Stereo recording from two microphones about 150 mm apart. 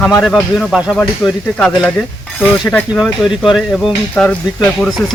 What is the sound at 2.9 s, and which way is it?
Speech, 5° right (ahead or behind).